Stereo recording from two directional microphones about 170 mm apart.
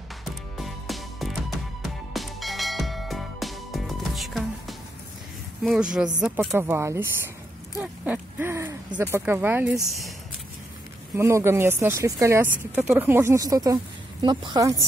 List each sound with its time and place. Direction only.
0.2 s music: centre (ahead or behind)
5.6 s speech: centre (ahead or behind)
11.1 s speech: 15° right (ahead or behind)